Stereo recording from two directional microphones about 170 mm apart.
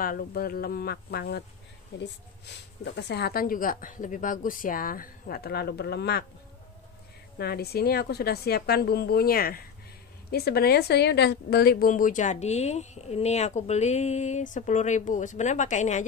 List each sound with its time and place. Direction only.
0.0 s speech: 55° left (ahead or behind)
2.0 s speech: 90° left; by 6.2 s 75° left (ahead or behind)
7.3 s a woman's voice: 65° left (ahead or behind); by 16.1 s 45° left (ahead or behind)